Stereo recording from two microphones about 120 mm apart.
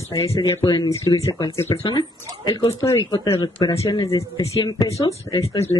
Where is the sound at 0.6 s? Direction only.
35° left (ahead or behind).